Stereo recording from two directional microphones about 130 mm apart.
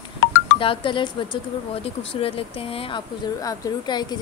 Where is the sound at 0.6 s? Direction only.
40° left (ahead or behind).